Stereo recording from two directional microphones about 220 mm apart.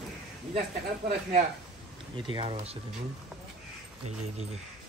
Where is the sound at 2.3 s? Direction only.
25° right (ahead or behind).